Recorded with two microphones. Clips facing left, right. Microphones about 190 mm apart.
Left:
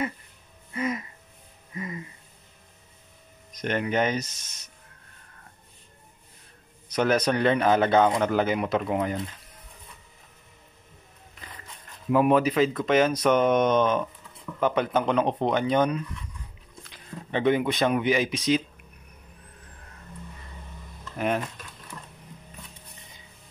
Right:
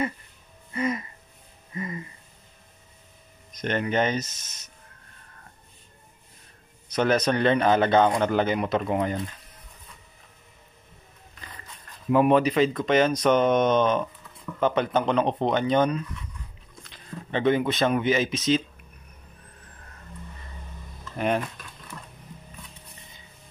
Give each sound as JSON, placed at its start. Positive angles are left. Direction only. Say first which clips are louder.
{"t": 0.7, "sound": "speech", "louder": "right 2 dB", "side_deg": 5}
{"t": 1.7, "sound": "music", "louder": "right 2 dB", "side_deg": 5}
{"t": 3.5, "sound": "speech", "louder": "right 1 dB", "side_deg": 10}
{"t": 4.3, "sound": "speech", "louder": "right 1 dB", "side_deg": -10}
{"t": 6.9, "sound": "speech", "louder": "right 1 dB", "side_deg": 10}
{"t": 12.1, "sound": "speech", "louder": "right 1 dB", "side_deg": 5}